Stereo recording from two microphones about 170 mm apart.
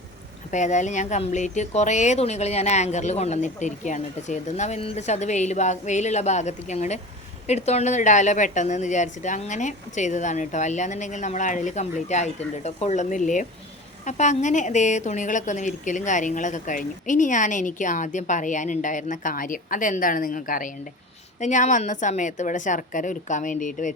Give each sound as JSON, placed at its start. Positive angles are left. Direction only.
{"t": 0.5, "sound": "a woman's voice", "side_deg": 45}